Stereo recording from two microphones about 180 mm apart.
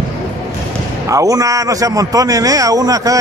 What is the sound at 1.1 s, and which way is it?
A man's voice, 20° right (ahead or behind).